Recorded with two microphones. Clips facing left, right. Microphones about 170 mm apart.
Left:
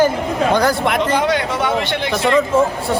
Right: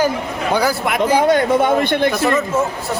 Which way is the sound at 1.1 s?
50° right (ahead or behind).